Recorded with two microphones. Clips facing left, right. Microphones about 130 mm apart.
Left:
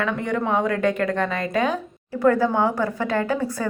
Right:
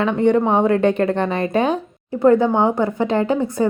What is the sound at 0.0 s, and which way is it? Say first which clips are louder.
A woman's voice: right 8 dB; 25° right (ahead or behind).